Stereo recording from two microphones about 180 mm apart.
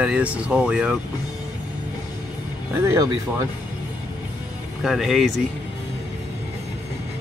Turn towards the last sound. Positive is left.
turn(degrees=0)  # may be behind; listen again after turning